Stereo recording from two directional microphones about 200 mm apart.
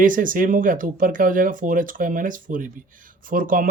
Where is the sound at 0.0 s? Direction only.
45° right (ahead or behind).